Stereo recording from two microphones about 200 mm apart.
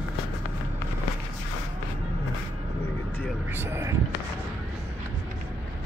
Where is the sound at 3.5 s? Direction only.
10° right (ahead or behind).